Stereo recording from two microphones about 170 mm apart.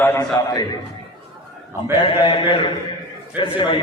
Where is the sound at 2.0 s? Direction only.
30° left (ahead or behind).